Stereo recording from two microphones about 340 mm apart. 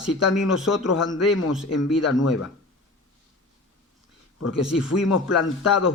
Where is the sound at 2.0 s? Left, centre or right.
Left.